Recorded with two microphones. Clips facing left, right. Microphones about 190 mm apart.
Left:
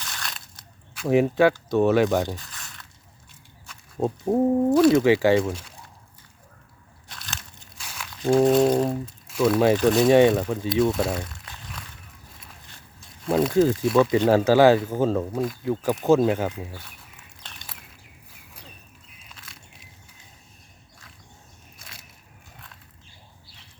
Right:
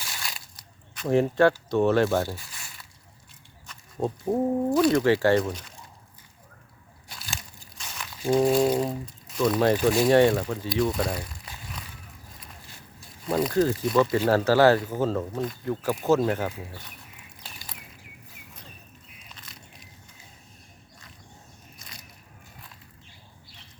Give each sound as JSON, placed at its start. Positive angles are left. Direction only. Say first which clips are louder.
{"t": 0.0, "sound": "crushing", "louder": "left 1 dB", "side_deg": -5}
{"t": 0.9, "sound": "speech", "louder": "left 2 dB", "side_deg": 10}
{"t": 2.5, "sound": "squish", "louder": "left 2 dB", "side_deg": -10}
{"t": 3.7, "sound": "speech", "louder": "left 3 dB", "side_deg": 10}
{"t": 7.1, "sound": "crumpling", "louder": "even", "side_deg": -5}
{"t": 8.4, "sound": "a sound", "louder": "left 3 dB", "side_deg": 0}
{"t": 9.3, "sound": "speech", "louder": "left 3 dB", "side_deg": 5}
{"t": 9.7, "sound": "a sound", "louder": "left 2 dB", "side_deg": 0}
{"t": 10.7, "sound": "speech", "louder": "left 4 dB", "side_deg": 25}
{"t": 10.9, "sound": "crumpling", "louder": "left 3 dB", "side_deg": 5}
{"t": 13.8, "sound": "a sound", "louder": "left 3 dB", "side_deg": 5}
{"t": 14.3, "sound": "speech", "louder": "left 3 dB", "side_deg": 15}
{"t": 16.5, "sound": "a sound", "louder": "left 3 dB", "side_deg": 5}
{"t": 19.4, "sound": "biting", "louder": "even", "side_deg": 0}